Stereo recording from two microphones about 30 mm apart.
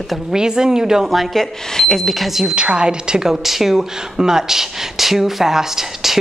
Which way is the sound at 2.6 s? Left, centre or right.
Right.